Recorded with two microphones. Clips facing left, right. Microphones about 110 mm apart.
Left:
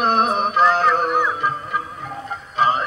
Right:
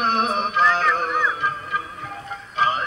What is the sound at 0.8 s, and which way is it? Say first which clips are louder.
Music: left 4 dB; 15° left (ahead or behind).